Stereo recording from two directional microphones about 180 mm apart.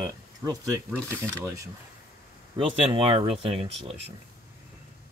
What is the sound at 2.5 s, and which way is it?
Speech, 30° right (ahead or behind).